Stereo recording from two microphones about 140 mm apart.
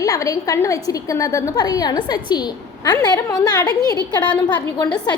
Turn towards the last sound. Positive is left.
turn(degrees=30)  # may be behind; listen again after turning